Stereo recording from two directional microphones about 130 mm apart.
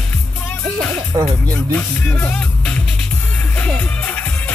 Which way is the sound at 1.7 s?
10° left (ahead or behind).